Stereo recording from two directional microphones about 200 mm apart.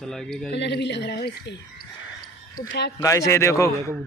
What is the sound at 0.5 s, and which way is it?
A woman's voice, 60° left (ahead or behind).